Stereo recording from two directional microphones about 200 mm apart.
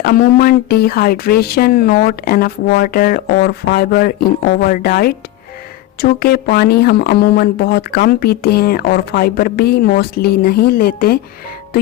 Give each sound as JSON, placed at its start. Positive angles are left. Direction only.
{"t": 0.0, "sound": "speech", "side_deg": 45}